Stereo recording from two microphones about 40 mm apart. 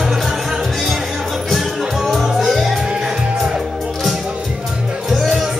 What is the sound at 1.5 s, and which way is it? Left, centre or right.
Music, centre.